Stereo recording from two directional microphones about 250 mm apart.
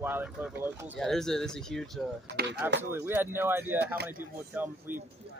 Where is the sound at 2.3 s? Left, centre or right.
Right.